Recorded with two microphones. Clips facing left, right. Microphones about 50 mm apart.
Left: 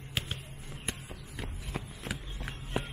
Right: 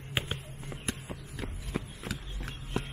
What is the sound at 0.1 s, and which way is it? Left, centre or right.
Basketball bounce, right.